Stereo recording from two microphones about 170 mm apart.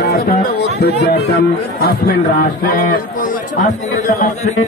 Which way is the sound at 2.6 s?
55° left (ahead or behind).